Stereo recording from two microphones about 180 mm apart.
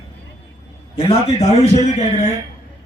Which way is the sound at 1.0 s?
35° left (ahead or behind).